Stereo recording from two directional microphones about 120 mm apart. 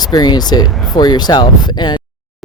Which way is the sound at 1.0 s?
35° left (ahead or behind).